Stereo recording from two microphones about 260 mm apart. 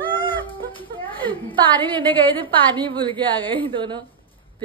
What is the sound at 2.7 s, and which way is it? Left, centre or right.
A woman's voice, centre.